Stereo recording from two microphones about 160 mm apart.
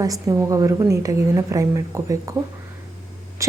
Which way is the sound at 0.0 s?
20° right (ahead or behind).